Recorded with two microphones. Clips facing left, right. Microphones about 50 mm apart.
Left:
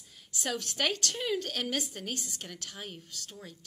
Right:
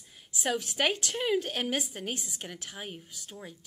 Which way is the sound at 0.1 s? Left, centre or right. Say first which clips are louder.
Right 4 dB; centre.